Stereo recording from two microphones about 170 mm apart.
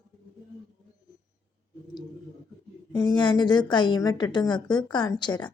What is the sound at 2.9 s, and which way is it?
A woman's voice, 25° left (ahead or behind).